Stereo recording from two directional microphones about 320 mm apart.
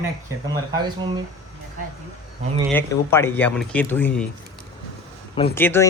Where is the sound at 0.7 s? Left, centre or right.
Centre.